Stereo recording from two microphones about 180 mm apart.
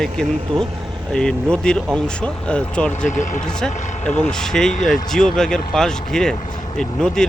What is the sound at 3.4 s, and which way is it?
Speech, 5° left (ahead or behind).